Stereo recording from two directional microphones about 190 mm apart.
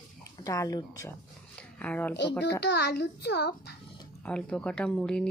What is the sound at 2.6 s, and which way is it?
A child's voice, 60° left (ahead or behind).